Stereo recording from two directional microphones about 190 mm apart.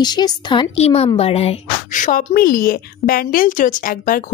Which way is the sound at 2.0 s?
50° left (ahead or behind).